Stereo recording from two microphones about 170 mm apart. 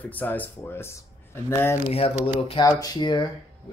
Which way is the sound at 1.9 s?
35° left (ahead or behind).